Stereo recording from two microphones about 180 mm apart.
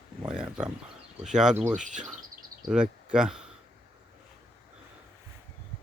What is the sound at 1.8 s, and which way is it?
Speech, 45° right (ahead or behind).